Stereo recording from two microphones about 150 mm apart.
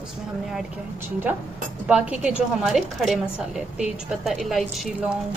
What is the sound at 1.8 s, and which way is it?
A woman's voice, 10° right (ahead or behind).